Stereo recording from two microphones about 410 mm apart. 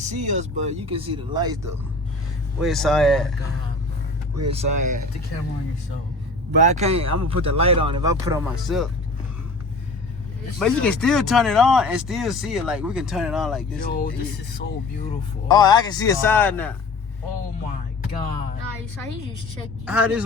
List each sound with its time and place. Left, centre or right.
0.0 s speech: centre
4.5 s speech: centre
6.7 s speech: centre
10.6 s speech: centre
13.8 s speech: left
15.4 s a man's voice: centre
19.8 s speech: centre